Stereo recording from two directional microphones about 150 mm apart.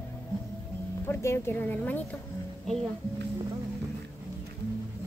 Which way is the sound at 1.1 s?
15° left (ahead or behind).